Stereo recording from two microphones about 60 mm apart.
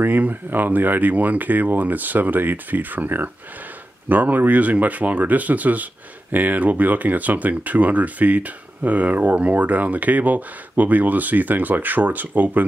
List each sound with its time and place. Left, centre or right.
0.0 s speech: right